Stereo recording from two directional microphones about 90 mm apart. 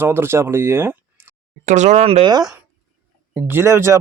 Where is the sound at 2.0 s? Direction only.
90° right.